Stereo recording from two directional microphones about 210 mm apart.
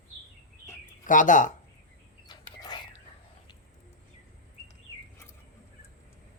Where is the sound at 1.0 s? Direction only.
40° left (ahead or behind).